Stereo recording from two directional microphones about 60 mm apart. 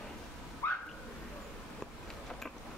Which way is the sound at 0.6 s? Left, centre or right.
Left.